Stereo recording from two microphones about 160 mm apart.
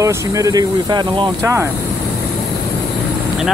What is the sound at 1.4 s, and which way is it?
Speech, 15° right (ahead or behind).